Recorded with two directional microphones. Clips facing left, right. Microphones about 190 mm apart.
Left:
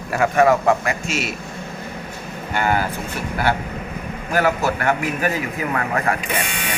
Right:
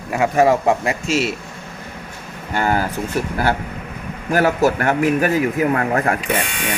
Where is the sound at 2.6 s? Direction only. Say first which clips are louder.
Right 2 dB; 40° right (ahead or behind).